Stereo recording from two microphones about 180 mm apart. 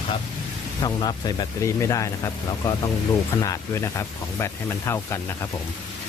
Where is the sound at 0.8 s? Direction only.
25° left (ahead or behind).